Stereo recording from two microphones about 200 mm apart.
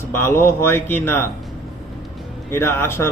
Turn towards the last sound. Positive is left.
turn(degrees=15)  # may be behind; listen again after turning